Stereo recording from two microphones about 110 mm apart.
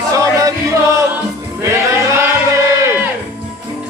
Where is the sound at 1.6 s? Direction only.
25° right (ahead or behind).